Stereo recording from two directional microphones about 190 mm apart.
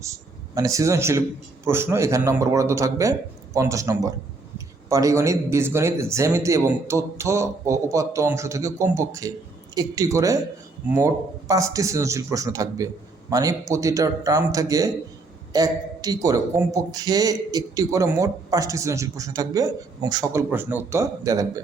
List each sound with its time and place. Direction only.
0.0 s speech: 15° right (ahead or behind)